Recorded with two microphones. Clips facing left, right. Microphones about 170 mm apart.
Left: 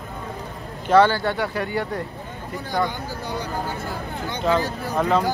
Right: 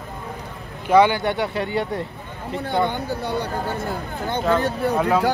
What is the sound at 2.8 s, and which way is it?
Speech, 60° right (ahead or behind).